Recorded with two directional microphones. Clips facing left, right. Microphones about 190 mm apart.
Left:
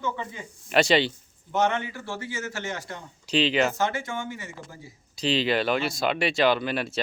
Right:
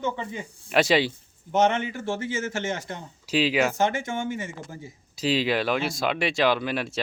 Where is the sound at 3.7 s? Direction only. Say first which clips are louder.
Right 3 dB; 20° right (ahead or behind).